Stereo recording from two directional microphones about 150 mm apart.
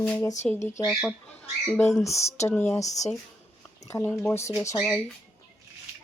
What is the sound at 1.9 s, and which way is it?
Speech, 20° left (ahead or behind).